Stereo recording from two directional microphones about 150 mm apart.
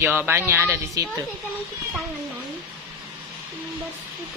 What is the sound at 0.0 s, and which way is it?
Speech, 15° right (ahead or behind).